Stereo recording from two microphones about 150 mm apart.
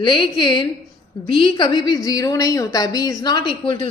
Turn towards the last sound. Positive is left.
turn(degrees=30)  # may be behind; listen again after turning